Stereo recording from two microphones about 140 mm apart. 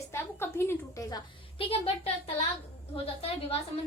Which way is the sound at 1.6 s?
45° left (ahead or behind).